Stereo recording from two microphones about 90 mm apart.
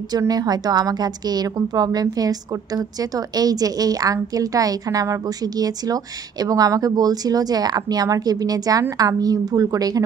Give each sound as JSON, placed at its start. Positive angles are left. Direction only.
{"t": 0.3, "sound": "a woman's voice", "side_deg": -45}